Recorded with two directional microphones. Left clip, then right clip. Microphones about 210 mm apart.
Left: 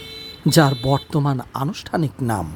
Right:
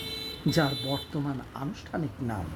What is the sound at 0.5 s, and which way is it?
Speech, 30° left (ahead or behind).